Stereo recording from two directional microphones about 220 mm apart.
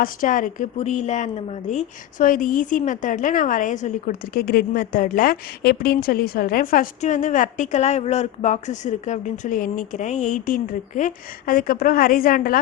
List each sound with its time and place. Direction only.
0.0 s a woman's voice: 40° left (ahead or behind)